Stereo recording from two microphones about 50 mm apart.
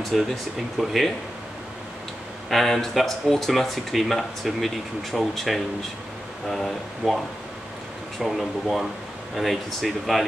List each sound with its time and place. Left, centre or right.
0.1 s speech: centre
2.5 s speech: centre
7.0 s speech: centre
8.2 s speech: centre